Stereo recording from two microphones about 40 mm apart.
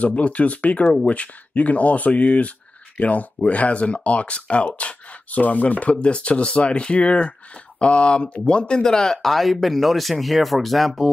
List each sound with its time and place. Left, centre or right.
0.0 s speech: left; by 9.3 s centre
9.3 s speech: centre